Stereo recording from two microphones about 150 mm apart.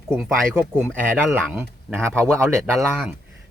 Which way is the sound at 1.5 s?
15° right (ahead or behind).